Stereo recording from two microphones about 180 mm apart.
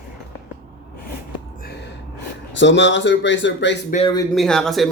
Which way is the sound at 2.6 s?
90° left.